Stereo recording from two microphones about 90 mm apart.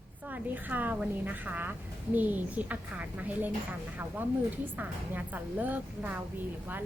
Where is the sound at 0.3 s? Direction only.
20° right (ahead or behind).